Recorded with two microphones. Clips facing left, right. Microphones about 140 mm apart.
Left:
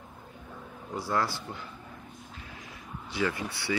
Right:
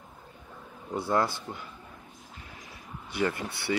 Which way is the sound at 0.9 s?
20° right (ahead or behind).